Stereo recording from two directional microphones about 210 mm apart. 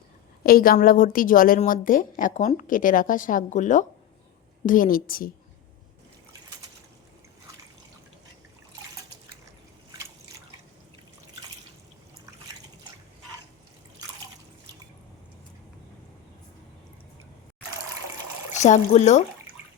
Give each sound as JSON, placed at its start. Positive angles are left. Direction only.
{"t": 0.4, "sound": "a woman's voice", "side_deg": 45}
{"t": 18.5, "sound": "a woman's voice", "side_deg": 35}